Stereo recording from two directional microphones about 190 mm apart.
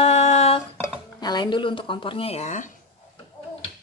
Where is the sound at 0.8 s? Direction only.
20° left (ahead or behind); by 2.7 s 40° left (ahead or behind).